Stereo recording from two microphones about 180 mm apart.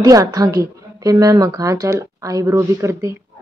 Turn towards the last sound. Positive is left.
turn(degrees=-15)  # may be behind; listen again after turning